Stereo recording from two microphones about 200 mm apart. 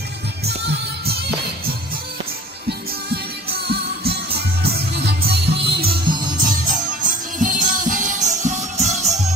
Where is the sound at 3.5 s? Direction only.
55° right (ahead or behind).